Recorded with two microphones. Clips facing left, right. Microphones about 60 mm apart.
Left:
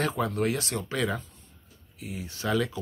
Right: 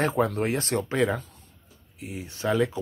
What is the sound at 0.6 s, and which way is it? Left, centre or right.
Speech, right.